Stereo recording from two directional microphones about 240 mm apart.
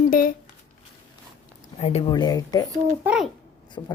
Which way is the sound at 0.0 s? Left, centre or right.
Left.